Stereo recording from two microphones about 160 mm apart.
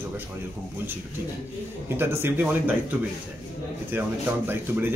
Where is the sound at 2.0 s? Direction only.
15° right (ahead or behind).